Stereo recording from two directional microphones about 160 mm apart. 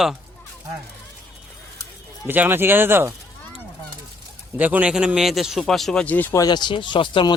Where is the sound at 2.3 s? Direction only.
15° right (ahead or behind).